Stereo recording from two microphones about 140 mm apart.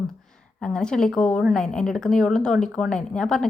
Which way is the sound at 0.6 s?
5° left (ahead or behind).